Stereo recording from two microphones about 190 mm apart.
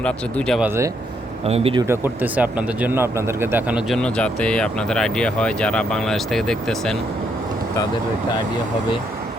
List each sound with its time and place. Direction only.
0.0 s speech: 5° left (ahead or behind)
1.5 s speech: 30° right (ahead or behind)
1.9 s speech: 10° right (ahead or behind)